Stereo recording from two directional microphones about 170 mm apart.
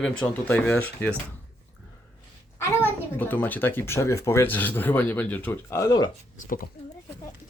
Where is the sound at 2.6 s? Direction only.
10° left (ahead or behind).